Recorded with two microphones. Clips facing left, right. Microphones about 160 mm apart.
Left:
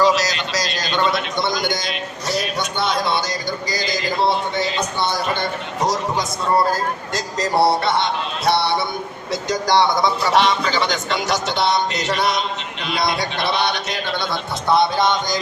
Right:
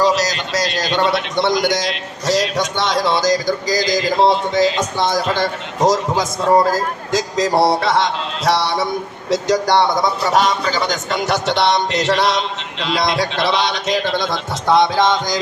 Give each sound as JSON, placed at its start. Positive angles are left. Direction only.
{"t": 0.0, "sound": "a sound", "side_deg": -40}
{"t": 6.7, "sound": "speech", "side_deg": -90}
{"t": 9.3, "sound": "a man's voice", "side_deg": -65}